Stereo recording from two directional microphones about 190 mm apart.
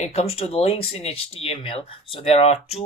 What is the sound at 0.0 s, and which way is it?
Speech, 35° left (ahead or behind).